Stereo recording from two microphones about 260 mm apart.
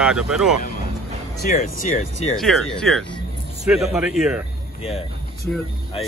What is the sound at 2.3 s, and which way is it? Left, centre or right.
Speech, centre.